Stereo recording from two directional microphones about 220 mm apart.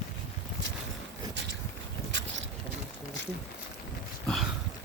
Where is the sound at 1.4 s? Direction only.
50° right (ahead or behind).